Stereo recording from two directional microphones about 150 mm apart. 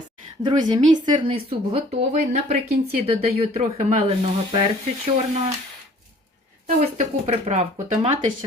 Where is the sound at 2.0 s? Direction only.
55° right (ahead or behind).